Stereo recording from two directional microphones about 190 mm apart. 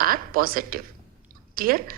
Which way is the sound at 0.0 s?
50° right (ahead or behind).